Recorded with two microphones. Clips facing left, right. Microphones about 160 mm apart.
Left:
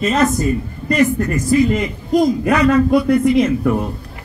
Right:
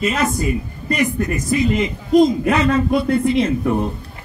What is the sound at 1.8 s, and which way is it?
A man's voice, 25° right (ahead or behind).